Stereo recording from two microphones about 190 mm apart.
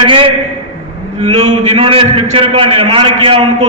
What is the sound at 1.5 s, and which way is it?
A man's voice, 30° right (ahead or behind).